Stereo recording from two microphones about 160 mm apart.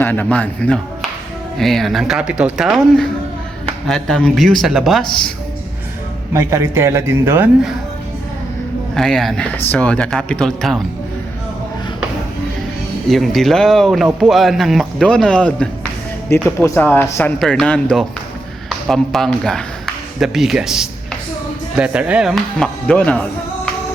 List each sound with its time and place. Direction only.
0.0 s speech: 10° left (ahead or behind)
6.3 s a man's voice: 15° right (ahead or behind)
9.0 s speech: centre (ahead or behind)
13.1 s speech: centre (ahead or behind)